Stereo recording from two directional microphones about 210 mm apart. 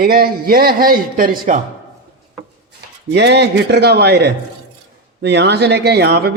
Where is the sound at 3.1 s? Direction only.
55° right (ahead or behind).